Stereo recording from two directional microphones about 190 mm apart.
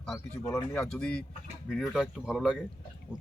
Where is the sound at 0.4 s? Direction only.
10° left (ahead or behind).